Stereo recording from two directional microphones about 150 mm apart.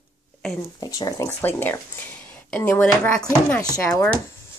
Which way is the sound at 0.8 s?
25° left (ahead or behind).